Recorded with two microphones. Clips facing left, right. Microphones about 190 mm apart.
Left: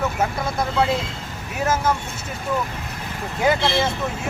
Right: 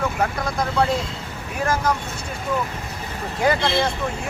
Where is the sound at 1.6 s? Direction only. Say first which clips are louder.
Left 1 dB; 5° left (ahead or behind).